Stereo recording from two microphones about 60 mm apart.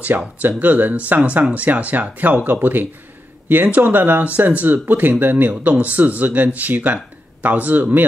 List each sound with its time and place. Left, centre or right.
0.4 s speech: right